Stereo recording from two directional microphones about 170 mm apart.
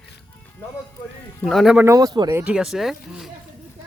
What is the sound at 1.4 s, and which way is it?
Speech, centre (ahead or behind).